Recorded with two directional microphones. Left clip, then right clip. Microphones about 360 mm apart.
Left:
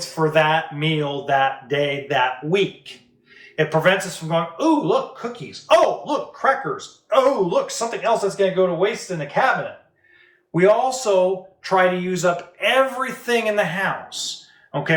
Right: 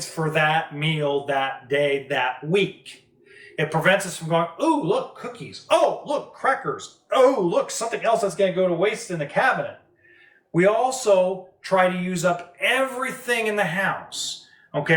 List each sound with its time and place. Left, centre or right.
0.3 s speech: centre
10.5 s speech: centre